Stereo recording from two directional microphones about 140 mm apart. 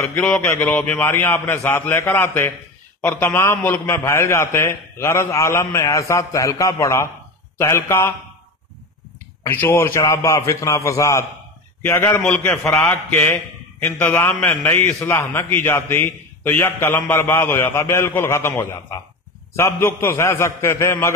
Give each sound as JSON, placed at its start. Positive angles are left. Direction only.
{"t": 0.5, "sound": "a man's voice", "side_deg": 15}
{"t": 9.4, "sound": "a man's voice", "side_deg": 15}